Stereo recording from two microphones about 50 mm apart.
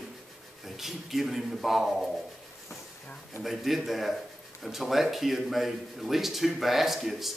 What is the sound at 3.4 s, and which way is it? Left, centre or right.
Speech, centre.